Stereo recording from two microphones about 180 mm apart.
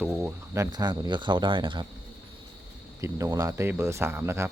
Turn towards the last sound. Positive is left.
turn(degrees=-15)  # may be behind; listen again after turning